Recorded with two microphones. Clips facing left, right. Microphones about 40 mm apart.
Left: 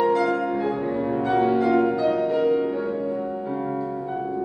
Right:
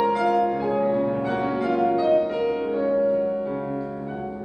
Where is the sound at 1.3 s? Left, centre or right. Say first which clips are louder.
Left 5 dB; left.